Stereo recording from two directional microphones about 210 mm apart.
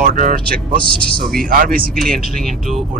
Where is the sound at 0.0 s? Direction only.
40° right (ahead or behind).